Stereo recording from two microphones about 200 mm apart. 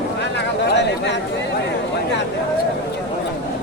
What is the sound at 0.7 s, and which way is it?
Chatter, 60° left (ahead or behind).